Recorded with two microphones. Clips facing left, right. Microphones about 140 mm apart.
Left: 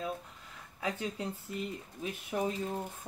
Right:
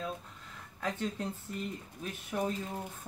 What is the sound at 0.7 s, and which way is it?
Speech, 10° left (ahead or behind).